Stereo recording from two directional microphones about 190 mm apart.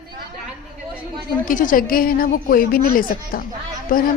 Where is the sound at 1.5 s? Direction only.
45° left (ahead or behind).